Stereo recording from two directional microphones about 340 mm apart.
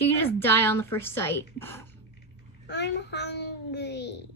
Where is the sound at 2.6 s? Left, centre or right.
Left.